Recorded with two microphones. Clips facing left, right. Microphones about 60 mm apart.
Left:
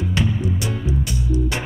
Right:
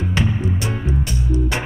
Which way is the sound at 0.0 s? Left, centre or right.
Right.